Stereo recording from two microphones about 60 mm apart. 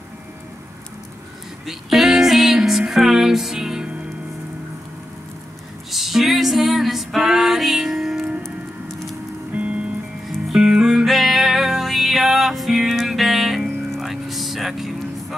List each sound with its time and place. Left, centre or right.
1.7 s music: centre
5.9 s music: centre
9.5 s music: right
10.2 s music: centre
10.6 s music: centre